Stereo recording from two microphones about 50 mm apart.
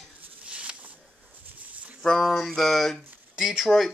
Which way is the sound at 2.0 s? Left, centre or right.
Centre.